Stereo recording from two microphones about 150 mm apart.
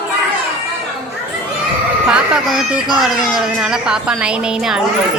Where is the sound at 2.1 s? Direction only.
5° right (ahead or behind).